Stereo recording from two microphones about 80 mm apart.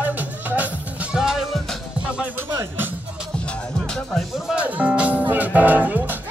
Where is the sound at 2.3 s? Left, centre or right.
Right.